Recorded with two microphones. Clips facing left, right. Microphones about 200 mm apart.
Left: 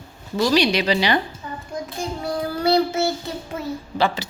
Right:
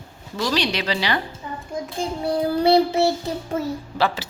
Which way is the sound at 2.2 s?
30° right (ahead or behind).